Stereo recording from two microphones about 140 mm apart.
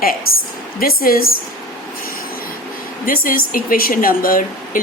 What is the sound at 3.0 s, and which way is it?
A woman's voice, 85° left.